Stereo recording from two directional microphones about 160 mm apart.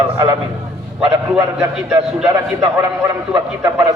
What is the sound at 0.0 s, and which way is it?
Speech, 20° right (ahead or behind).